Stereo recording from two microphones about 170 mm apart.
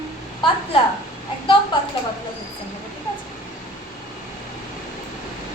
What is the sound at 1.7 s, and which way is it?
Speech, 30° left (ahead or behind).